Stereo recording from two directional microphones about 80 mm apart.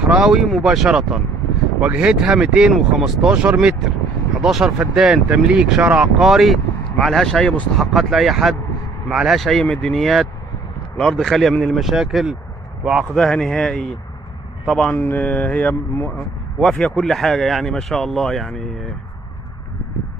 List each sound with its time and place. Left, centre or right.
0.0 s speech: centre
4.4 s speech: centre
6.2 s speech: centre
13.1 s speech: centre
15.0 s speech: left
16.5 s speech: centre